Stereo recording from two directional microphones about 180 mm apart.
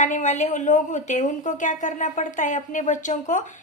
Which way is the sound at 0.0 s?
45° left (ahead or behind).